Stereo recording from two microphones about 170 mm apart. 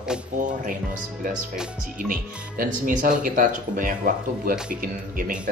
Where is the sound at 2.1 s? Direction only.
50° right (ahead or behind).